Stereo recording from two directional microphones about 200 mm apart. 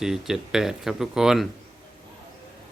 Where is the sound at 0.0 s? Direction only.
Centre (ahead or behind).